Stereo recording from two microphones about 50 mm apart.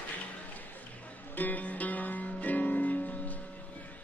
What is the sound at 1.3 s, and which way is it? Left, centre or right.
Music, left.